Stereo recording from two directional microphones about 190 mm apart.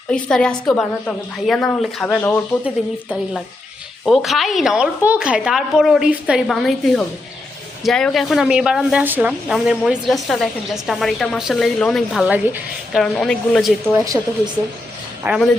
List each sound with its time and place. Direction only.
0.1 s a woman's voice: 5° left (ahead or behind)
2.6 s a woman's voice: 5° right (ahead or behind)
15.2 s speech: 5° right (ahead or behind)